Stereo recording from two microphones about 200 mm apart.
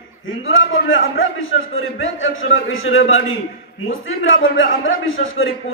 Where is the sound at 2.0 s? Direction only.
80° left.